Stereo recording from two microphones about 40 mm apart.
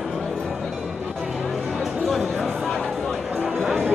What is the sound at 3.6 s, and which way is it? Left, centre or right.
Music, right.